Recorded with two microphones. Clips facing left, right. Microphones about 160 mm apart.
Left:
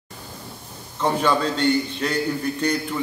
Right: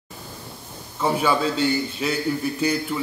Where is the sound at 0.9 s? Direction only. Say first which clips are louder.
Even; 5° right (ahead or behind).